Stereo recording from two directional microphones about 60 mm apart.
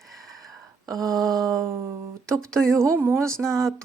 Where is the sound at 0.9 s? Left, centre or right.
Right.